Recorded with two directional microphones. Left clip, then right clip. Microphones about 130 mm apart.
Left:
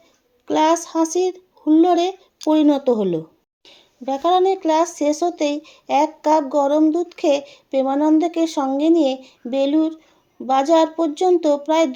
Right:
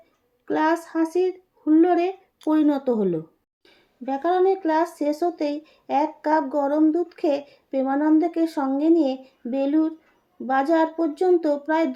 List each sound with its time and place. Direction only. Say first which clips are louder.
0.4 s a sound: left 5 dB; 25° left (ahead or behind)
0.9 s speech: left 4 dB; 30° left (ahead or behind)
1.9 s speech: left 4 dB; centre (ahead or behind)
2.4 s speech: left 5 dB; 30° left (ahead or behind)
4.0 s speech: left 4 dB; 25° left (ahead or behind)